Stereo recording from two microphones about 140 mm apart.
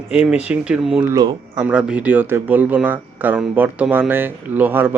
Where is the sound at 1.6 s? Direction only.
10° right (ahead or behind).